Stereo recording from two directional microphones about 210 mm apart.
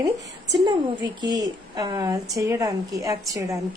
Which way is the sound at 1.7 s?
20° right (ahead or behind).